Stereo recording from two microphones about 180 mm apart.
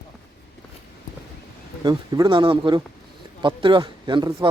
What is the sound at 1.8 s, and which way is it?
Speech, 25° right (ahead or behind).